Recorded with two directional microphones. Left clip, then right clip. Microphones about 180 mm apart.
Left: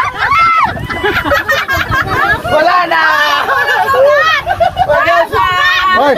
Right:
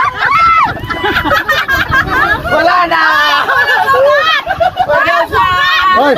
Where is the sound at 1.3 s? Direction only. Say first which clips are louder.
Right 1 dB; 45° right (ahead or behind).